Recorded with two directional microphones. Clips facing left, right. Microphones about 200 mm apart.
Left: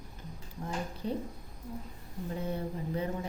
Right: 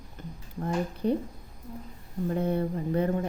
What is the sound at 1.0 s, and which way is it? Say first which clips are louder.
Speech: right 8 dB; 60° right (ahead or behind).